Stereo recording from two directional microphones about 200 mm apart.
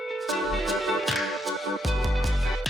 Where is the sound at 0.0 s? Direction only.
Centre (ahead or behind).